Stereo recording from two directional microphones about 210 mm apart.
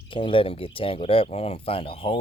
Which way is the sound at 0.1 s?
25° left (ahead or behind).